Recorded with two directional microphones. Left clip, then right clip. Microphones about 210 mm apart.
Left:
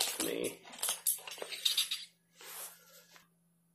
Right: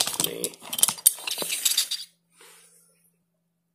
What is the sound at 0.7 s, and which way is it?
Scissors, 50° right (ahead or behind).